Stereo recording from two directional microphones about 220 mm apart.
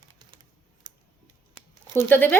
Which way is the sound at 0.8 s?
20° right (ahead or behind).